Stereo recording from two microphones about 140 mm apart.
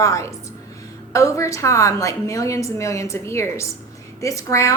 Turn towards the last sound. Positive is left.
turn(degrees=20)  # may be behind; listen again after turning